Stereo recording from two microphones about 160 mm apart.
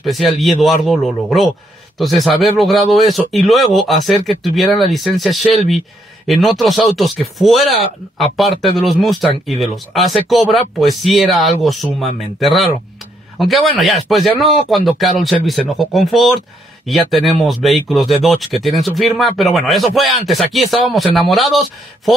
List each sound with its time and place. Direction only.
0.0 s speech: centre (ahead or behind)